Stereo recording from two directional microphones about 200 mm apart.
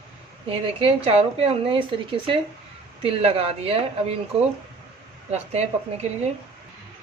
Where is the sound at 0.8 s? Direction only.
30° right (ahead or behind).